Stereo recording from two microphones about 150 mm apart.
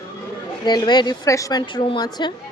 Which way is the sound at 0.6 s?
30° left (ahead or behind).